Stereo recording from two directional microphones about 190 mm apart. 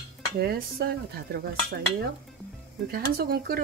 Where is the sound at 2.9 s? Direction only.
55° right (ahead or behind).